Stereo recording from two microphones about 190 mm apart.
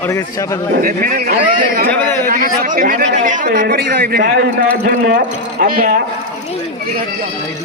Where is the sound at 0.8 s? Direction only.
50° right (ahead or behind).